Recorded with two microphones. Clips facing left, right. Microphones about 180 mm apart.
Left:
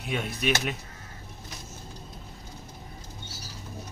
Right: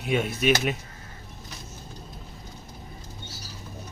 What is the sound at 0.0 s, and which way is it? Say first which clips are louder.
Speech: right 5 dB; 5° right (ahead or behind).